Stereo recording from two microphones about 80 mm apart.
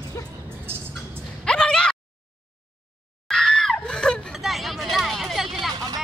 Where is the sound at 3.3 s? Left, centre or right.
Centre.